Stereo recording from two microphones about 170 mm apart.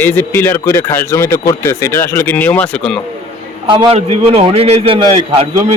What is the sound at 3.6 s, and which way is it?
A man's voice, 30° right (ahead or behind).